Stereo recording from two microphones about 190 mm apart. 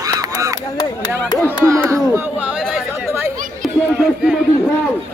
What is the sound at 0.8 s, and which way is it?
Speech, 20° left (ahead or behind).